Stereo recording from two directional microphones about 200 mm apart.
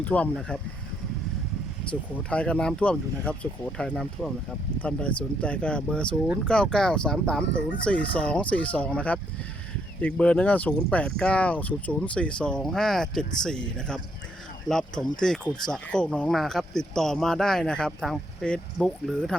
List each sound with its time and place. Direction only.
0.0 s speech: 5° left (ahead or behind)
1.8 s speech: 25° left (ahead or behind)
2.3 s speech: 5° left (ahead or behind)